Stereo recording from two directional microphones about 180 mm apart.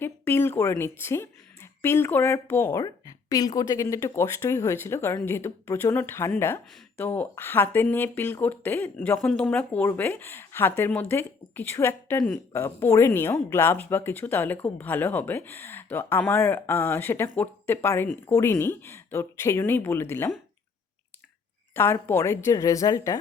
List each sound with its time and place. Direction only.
0.0 s speech: 15° left (ahead or behind)
21.8 s speech: 10° left (ahead or behind)